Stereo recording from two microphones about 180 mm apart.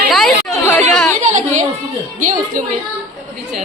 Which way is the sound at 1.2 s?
40° right (ahead or behind).